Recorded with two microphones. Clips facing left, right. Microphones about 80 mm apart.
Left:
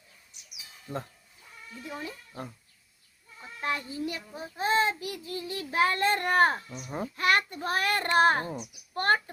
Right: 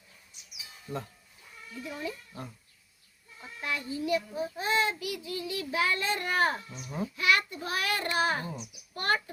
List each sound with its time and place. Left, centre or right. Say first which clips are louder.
0.9 s a child's voice: left 1 dB; left
3.6 s a child's voice: left 2 dB; left